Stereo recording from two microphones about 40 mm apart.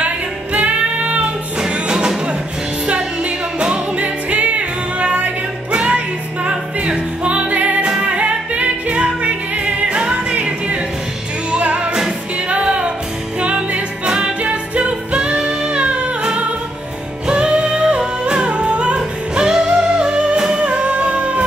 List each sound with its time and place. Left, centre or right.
0.0 s music: right
1.7 s music: right
4.0 s music: right
17.3 s music: right